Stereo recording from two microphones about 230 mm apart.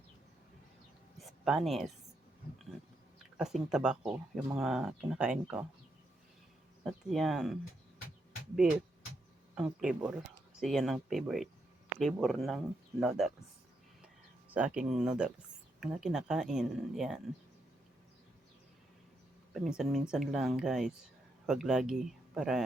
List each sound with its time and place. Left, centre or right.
1.2 s a sound: centre
3.3 s speech: centre
6.8 s speech: centre
9.6 s speech: centre
14.5 s speech: centre
19.5 s speech: centre